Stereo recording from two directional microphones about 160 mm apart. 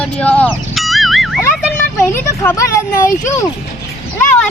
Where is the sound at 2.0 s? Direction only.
20° left (ahead or behind).